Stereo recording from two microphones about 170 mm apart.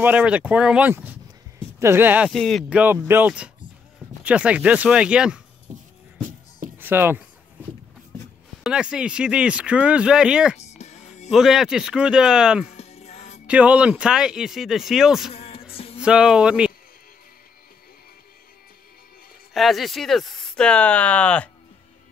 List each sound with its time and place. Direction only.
0.0 s speech: 5° right (ahead or behind)
3.1 s speech: 10° right (ahead or behind)
6.8 s speech: 10° right (ahead or behind)
8.6 s speech: 5° right (ahead or behind)
10.8 s music: 40° left (ahead or behind)
11.2 s speech: centre (ahead or behind)
12.7 s music: 40° left (ahead or behind)
13.5 s speech: 5° right (ahead or behind)
15.3 s music: 35° left (ahead or behind)
16.0 s speech: 5° right (ahead or behind)
19.5 s speech: centre (ahead or behind)